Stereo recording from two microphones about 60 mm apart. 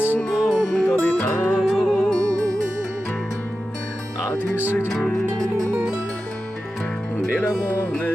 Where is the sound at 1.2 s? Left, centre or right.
Left.